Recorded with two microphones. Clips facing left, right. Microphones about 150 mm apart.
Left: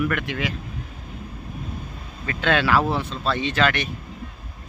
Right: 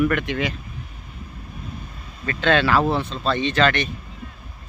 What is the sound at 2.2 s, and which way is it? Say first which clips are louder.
Speech: right 2 dB; 10° left (ahead or behind).